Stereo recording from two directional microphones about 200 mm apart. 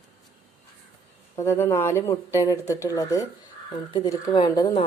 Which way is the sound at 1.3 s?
15° left (ahead or behind).